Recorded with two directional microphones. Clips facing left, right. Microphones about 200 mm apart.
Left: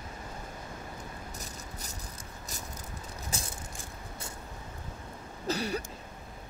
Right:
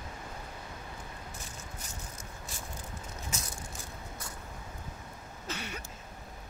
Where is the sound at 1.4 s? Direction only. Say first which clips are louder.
Left 2 dB; 35° left (ahead or behind).